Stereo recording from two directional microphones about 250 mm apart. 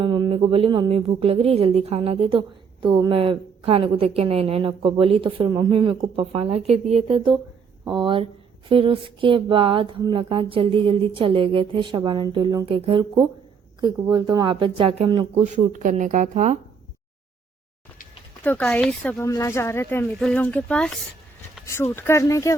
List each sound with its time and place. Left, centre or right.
0.0 s a woman's voice: centre
18.4 s speech: centre